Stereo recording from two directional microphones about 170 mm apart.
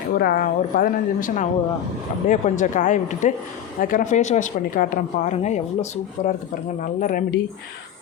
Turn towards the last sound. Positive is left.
turn(degrees=50)  # may be behind; listen again after turning